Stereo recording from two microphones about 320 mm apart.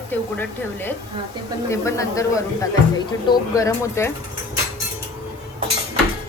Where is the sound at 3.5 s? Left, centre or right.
Centre.